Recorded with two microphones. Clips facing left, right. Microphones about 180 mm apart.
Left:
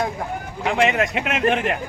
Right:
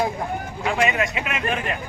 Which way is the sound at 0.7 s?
70° left (ahead or behind).